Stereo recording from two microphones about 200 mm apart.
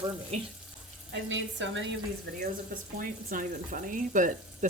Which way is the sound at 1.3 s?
65° right (ahead or behind).